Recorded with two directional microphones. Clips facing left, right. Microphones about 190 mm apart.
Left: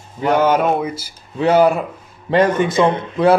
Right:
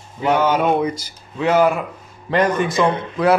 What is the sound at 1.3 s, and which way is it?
A man's voice, 35° left (ahead or behind).